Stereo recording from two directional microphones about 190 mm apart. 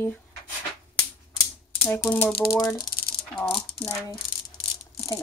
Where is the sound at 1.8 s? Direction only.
10° left (ahead or behind).